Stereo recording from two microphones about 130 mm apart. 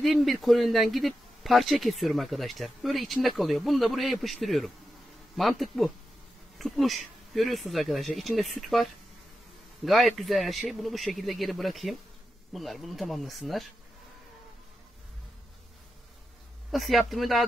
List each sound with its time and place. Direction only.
0.0 s speech: centre (ahead or behind)
9.8 s speech: centre (ahead or behind)
16.7 s speech: centre (ahead or behind)